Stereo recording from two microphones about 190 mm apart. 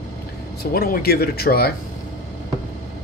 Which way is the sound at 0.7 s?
50° left (ahead or behind).